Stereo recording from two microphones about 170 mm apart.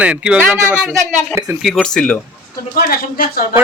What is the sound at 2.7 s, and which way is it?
Speech, 60° left (ahead or behind).